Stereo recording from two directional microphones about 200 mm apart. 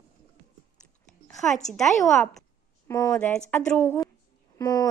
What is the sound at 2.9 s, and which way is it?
Speech, 15° left (ahead or behind).